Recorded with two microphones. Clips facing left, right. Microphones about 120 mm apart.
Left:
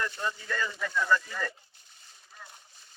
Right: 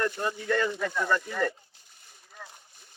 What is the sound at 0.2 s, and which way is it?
Speech, 55° right (ahead or behind).